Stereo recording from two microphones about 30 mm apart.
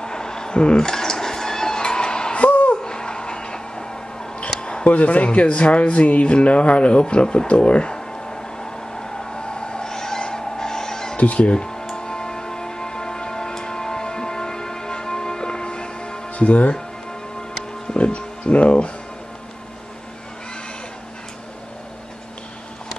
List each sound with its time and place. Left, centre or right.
0.0 s a sound: left
0.6 s speech: left
0.8 s music: centre
2.3 s a sound: left
2.8 s a sound: left
4.8 s speech: left
7.9 s a sound: left
11.1 s speech: left
11.5 s speech: left
11.9 s music: left
16.3 s speech: left
17.9 s music: left